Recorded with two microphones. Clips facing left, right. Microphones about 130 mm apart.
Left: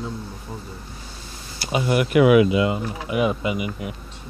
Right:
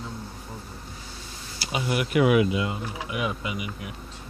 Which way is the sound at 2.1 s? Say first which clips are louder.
Left 6 dB; 90° left.